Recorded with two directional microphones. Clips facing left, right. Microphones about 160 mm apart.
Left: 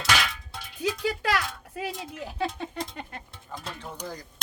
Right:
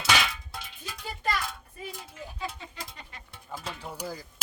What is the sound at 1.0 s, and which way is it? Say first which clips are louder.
Speech: left 1 dB; 90° left.